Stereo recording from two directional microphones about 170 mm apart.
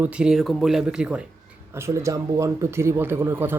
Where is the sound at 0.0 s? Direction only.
5° right (ahead or behind).